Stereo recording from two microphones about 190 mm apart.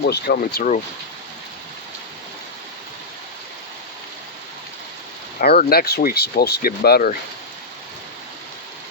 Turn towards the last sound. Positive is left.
turn(degrees=55)  # may be behind; listen again after turning